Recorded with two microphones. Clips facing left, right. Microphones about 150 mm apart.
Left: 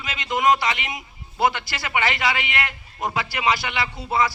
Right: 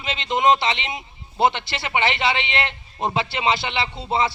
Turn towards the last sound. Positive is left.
turn(degrees=-25)  # may be behind; listen again after turning